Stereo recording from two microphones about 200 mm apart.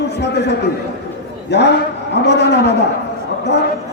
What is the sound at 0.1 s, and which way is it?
A man's voice, 55° left (ahead or behind).